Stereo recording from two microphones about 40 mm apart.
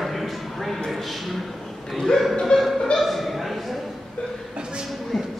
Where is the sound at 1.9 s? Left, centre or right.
Centre.